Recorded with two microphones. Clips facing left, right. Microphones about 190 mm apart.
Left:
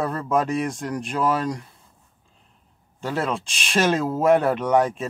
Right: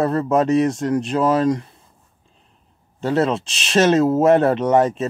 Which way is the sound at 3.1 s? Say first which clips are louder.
Right 7 dB; 25° right (ahead or behind).